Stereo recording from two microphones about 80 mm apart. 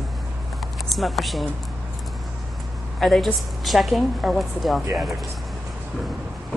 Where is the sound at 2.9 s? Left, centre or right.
Centre.